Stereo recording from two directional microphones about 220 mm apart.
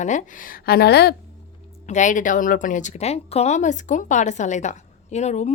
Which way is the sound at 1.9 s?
35° left (ahead or behind).